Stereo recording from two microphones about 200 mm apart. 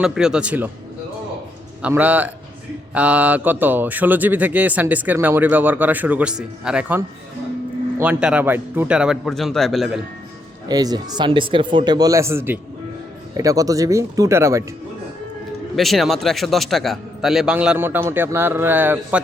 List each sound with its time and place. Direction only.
0.0 s a man's voice: 5° right (ahead or behind)
1.8 s a man's voice: 10° right (ahead or behind)
10.7 s speech: 20° right (ahead or behind)
15.7 s a man's voice: centre (ahead or behind)